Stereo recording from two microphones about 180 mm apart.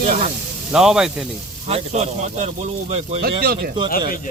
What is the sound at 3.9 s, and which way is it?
Speech, 50° left (ahead or behind).